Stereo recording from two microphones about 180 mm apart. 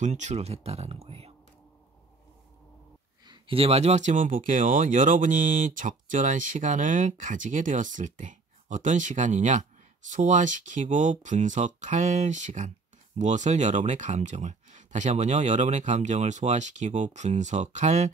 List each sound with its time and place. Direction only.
0.0 s speech: 40° right (ahead or behind)
3.3 s speech: 30° right (ahead or behind)